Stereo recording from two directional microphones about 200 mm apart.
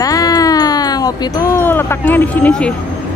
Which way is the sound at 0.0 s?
20° left (ahead or behind).